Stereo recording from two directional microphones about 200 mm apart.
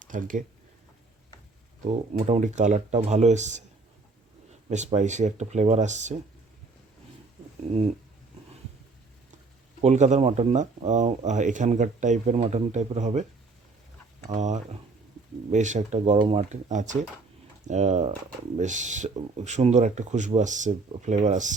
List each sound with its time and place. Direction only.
0.1 s speech: 40° right (ahead or behind)
1.8 s speech: 35° right (ahead or behind)
4.7 s speech: 35° right (ahead or behind)
9.8 s speech: 35° right (ahead or behind)
14.3 s speech: 35° right (ahead or behind)